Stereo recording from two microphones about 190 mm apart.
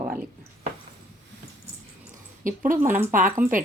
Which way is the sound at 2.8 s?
10° right (ahead or behind).